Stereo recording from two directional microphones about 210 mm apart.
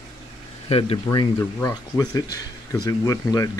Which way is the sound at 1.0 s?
20° left (ahead or behind).